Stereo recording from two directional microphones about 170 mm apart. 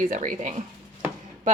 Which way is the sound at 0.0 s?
50° right (ahead or behind).